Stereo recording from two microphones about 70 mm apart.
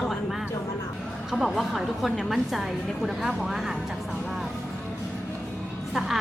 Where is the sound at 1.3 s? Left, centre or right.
Centre.